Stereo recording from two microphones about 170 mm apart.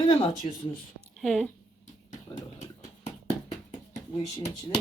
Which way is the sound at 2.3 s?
45° left (ahead or behind).